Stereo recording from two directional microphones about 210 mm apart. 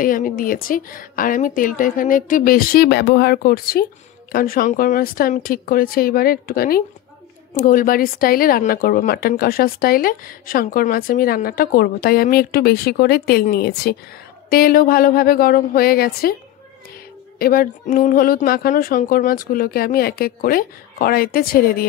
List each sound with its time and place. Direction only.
0.0 s a woman's voice: 40° left (ahead or behind)
17.4 s speech: 45° left (ahead or behind)